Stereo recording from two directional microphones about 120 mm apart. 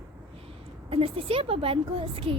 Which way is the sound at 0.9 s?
55° right (ahead or behind).